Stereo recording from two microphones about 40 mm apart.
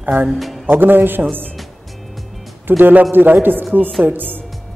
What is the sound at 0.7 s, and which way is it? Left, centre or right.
Speech, right.